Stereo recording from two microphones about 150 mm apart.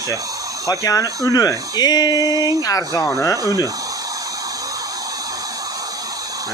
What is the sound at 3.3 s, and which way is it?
Speech, 20° right (ahead or behind).